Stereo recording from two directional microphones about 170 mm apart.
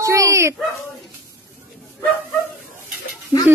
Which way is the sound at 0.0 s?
20° right (ahead or behind).